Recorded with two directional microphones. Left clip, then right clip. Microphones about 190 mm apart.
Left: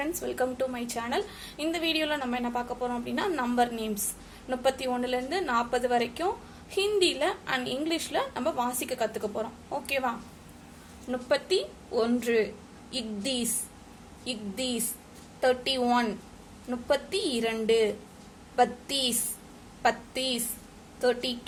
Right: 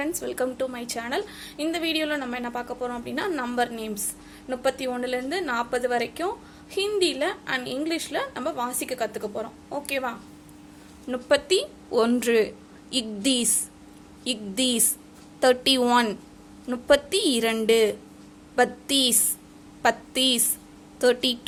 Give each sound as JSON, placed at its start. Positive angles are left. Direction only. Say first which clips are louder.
{"t": 0.0, "sound": "a woman's voice", "louder": "right 2 dB", "side_deg": -20}